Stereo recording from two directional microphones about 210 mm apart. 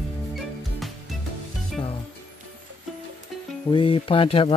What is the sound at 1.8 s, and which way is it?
Music, 20° left (ahead or behind).